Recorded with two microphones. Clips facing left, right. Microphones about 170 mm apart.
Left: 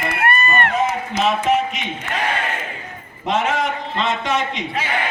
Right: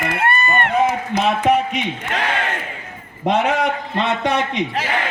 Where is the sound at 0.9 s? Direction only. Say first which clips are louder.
Right 1 dB; 60° right (ahead or behind).